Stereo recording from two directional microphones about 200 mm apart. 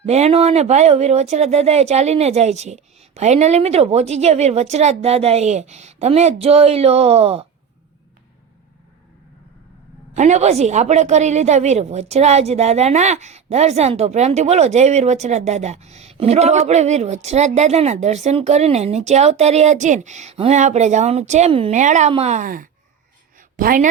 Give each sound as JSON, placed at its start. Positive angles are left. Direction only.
{"t": 0.0, "sound": "a woman's voice", "side_deg": -30}
{"t": 10.2, "sound": "a woman's voice", "side_deg": -35}
{"t": 23.4, "sound": "a sound", "side_deg": -45}